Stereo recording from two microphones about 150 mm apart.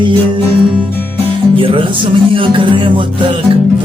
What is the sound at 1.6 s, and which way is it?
Music, 35° right (ahead or behind).